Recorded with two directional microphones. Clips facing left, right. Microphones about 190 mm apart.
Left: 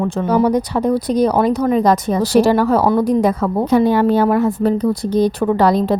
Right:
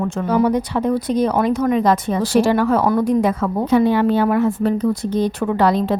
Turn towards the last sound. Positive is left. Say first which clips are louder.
# left 3 dB
turn(degrees=40)  # may be behind; listen again after turning